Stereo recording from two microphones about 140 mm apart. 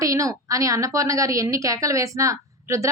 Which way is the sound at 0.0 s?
25° right (ahead or behind).